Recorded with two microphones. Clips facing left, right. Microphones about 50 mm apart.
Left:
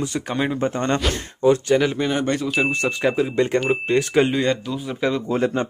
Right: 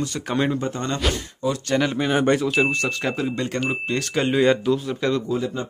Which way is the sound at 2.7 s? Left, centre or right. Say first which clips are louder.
Left 3 dB; centre.